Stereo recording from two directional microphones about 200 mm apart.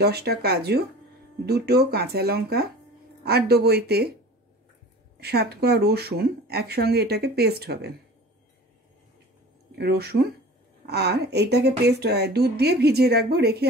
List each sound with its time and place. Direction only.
0.0 s speech: 55° right (ahead or behind)
5.2 s speech: 55° right (ahead or behind)
9.8 s speech: 55° right (ahead or behind)